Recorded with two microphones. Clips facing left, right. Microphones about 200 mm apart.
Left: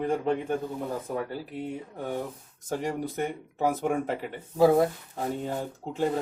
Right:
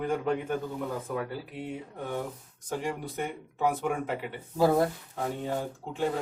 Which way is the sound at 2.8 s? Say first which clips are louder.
Left 4 dB; 45° left (ahead or behind).